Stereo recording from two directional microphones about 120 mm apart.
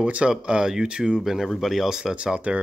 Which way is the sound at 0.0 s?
10° right (ahead or behind).